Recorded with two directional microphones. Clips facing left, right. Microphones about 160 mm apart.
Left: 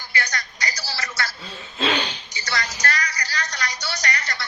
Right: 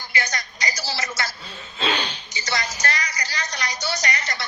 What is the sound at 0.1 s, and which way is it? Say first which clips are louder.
A woman's voice: even; 15° right (ahead or behind).